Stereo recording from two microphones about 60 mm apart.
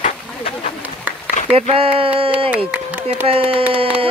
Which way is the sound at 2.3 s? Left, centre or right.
Right.